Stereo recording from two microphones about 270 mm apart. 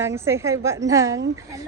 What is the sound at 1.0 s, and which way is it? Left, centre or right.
Speech, right.